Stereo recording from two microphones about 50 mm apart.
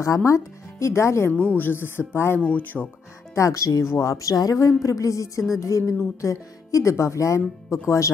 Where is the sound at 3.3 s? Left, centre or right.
Left.